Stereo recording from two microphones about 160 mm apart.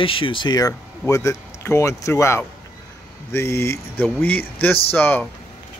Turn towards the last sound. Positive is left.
turn(degrees=10)  # may be behind; listen again after turning